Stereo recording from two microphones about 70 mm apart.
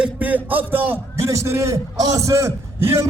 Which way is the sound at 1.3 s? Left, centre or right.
Right.